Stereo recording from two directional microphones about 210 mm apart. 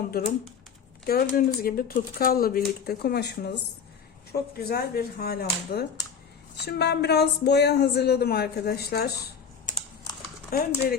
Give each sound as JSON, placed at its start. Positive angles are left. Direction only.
{"t": 0.1, "sound": "speech", "side_deg": 45}